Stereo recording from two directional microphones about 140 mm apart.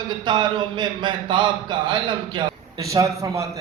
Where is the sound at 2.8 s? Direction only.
25° right (ahead or behind).